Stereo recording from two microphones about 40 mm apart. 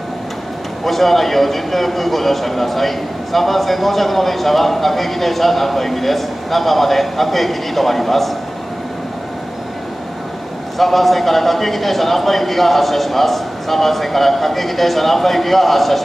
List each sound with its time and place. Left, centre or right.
0.8 s a man's voice: centre
10.8 s a man's voice: centre